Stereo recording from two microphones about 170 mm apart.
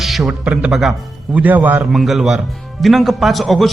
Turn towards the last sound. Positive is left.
turn(degrees=0)  # may be behind; listen again after turning